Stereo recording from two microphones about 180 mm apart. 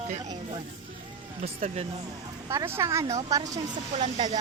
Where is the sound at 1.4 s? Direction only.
40° right (ahead or behind).